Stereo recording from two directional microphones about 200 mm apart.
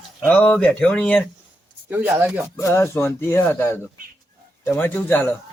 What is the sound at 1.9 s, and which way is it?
Speech, 10° right (ahead or behind).